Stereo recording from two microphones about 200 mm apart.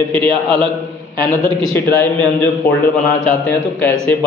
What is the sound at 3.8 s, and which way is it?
Speech, 10° left (ahead or behind).